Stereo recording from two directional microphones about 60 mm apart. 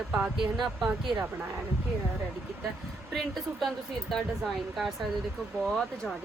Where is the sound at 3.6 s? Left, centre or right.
Centre.